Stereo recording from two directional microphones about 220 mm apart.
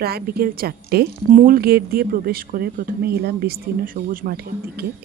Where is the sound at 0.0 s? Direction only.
45° right (ahead or behind).